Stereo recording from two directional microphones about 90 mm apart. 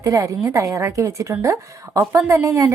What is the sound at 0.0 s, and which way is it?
A woman's voice, 35° right (ahead or behind).